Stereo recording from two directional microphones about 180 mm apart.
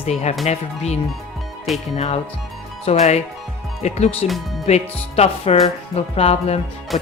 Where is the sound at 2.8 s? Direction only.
35° left (ahead or behind).